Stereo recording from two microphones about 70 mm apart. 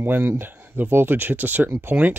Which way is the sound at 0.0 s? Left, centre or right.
Right.